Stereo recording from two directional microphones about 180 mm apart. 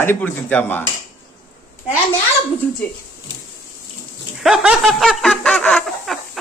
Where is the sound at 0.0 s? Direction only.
10° left (ahead or behind).